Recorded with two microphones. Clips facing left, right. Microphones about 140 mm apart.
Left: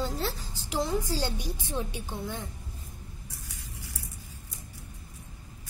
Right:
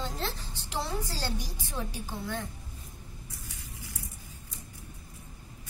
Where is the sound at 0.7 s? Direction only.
15° left (ahead or behind).